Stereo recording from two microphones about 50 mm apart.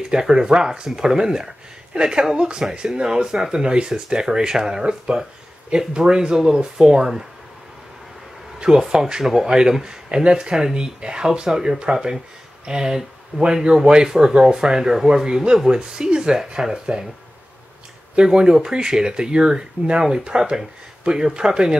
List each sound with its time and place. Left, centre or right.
0.0 s speech: centre
8.5 s speech: centre
18.1 s speech: centre